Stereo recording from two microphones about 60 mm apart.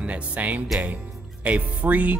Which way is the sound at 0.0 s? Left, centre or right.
Right.